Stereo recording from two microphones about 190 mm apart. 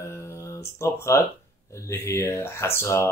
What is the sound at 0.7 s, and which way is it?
Speech, 15° left (ahead or behind).